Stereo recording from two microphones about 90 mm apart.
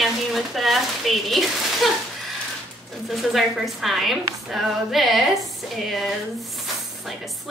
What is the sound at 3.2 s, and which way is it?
Speech, centre (ahead or behind).